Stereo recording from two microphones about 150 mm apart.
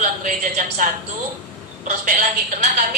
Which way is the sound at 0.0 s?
60° right (ahead or behind).